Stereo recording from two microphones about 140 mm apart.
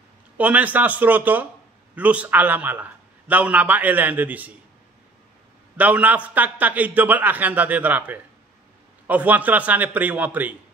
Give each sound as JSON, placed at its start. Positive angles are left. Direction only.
{"t": 0.4, "sound": "a man's voice", "side_deg": -10}
{"t": 5.8, "sound": "a man's voice", "side_deg": -10}